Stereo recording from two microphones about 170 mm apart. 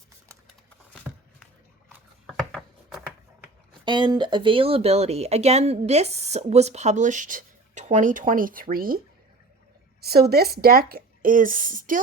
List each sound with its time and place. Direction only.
2.2 s a sound: centre (ahead or behind)
3.8 s speech: 25° right (ahead or behind); by 9.0 s 60° right (ahead or behind)
10.0 s speech: 65° right (ahead or behind); by 11.9 s 50° right (ahead or behind)